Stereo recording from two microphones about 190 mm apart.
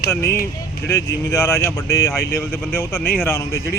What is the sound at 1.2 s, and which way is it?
Speech, 20° left (ahead or behind).